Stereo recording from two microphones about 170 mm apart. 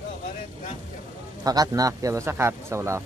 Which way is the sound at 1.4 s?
20° right (ahead or behind).